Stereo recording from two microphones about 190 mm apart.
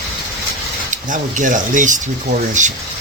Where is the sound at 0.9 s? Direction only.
40° right (ahead or behind).